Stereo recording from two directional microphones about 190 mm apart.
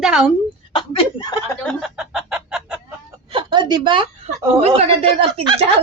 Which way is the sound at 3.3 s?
25° right (ahead or behind).